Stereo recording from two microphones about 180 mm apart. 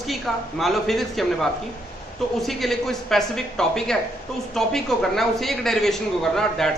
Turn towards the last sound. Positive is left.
turn(degrees=0)  # may be behind; listen again after turning